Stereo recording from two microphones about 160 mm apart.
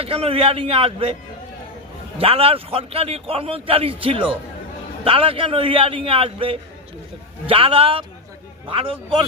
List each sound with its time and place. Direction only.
0.0 s a man's voice: 35° right (ahead or behind)
2.1 s a man's voice: 35° right (ahead or behind)